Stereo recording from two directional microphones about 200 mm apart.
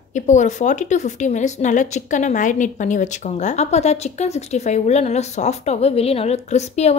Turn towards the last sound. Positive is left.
turn(degrees=35)  # may be behind; listen again after turning